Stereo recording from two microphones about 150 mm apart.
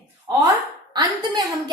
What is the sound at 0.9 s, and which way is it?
Speech, 30° right (ahead or behind).